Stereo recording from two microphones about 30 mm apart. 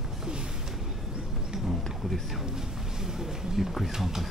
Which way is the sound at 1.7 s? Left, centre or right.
Centre.